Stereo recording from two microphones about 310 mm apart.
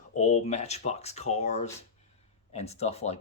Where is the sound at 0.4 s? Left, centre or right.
Left.